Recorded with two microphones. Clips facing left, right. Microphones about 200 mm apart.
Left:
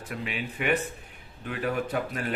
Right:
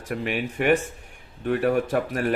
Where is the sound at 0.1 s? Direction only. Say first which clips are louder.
Right 7 dB; 50° right (ahead or behind).